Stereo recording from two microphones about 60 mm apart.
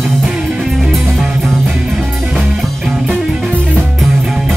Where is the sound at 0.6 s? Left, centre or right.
Centre.